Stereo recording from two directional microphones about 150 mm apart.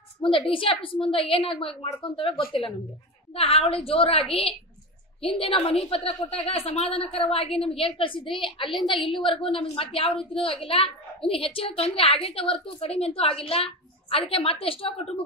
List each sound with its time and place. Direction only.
0.2 s a woman's voice: 35° left (ahead or behind)